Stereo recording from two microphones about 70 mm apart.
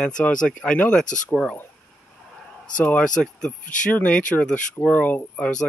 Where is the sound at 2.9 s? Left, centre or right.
Centre.